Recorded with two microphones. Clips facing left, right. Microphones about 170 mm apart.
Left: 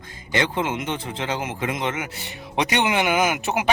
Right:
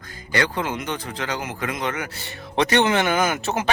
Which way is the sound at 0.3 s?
20° left (ahead or behind).